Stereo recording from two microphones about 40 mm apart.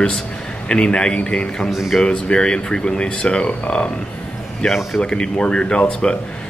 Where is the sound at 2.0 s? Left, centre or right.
Left.